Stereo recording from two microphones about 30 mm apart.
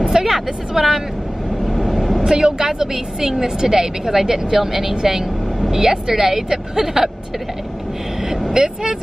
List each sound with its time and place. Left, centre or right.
0.0 s vehicle: centre
1.7 s vehicle: centre
2.2 s a woman's voice: centre
8.6 s speech: right